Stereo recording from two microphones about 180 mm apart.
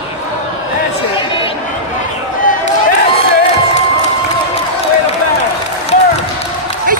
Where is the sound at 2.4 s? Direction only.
50° left (ahead or behind).